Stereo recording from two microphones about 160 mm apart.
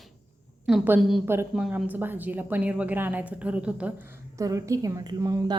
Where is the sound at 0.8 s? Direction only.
10° right (ahead or behind).